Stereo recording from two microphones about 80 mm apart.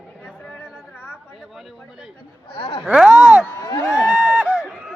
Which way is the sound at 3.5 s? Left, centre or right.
Left.